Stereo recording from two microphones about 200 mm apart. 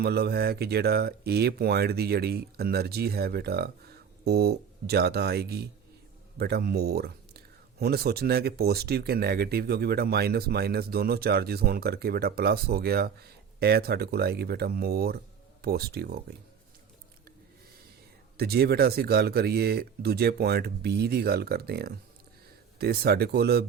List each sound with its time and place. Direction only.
0.0 s speech: 50° right (ahead or behind)
18.3 s speech: 50° right (ahead or behind)